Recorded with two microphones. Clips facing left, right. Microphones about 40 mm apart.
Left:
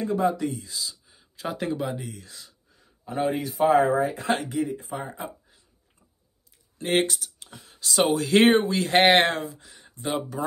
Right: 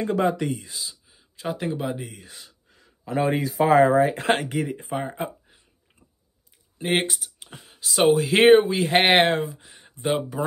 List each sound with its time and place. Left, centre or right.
0.2 s speech: right
0.7 s speech: right
1.0 s speech: centre
2.2 s speech: right
2.7 s speech: right
4.1 s speech: right
6.8 s speech: centre
9.4 s speech: right